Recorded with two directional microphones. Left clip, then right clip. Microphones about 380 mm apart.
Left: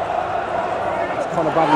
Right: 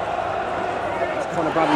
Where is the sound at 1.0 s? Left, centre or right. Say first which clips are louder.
Left 2 dB; centre.